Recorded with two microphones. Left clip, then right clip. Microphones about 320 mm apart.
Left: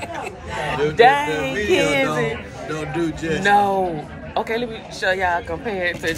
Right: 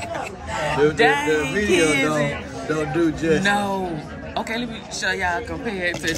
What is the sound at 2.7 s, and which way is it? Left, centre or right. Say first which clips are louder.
Speech: right 3 dB; right.